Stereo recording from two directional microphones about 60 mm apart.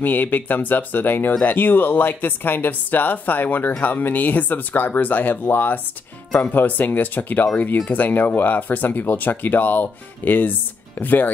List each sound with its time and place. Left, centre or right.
0.0 s speech: left